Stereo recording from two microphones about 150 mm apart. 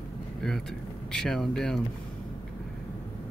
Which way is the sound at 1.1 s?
5° left (ahead or behind).